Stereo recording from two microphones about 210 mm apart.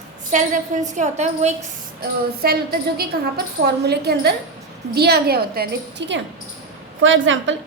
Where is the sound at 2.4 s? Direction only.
45° right (ahead or behind).